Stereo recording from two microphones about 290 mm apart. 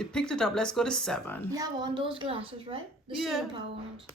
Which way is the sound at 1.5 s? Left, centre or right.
Centre.